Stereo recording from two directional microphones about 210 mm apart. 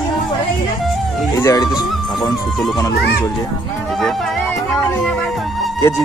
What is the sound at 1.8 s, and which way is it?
Music, 20° left (ahead or behind).